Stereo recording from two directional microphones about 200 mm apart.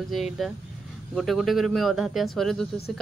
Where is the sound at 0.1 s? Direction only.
Centre (ahead or behind).